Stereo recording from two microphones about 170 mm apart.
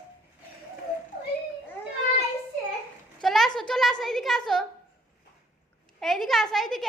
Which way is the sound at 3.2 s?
Centre (ahead or behind).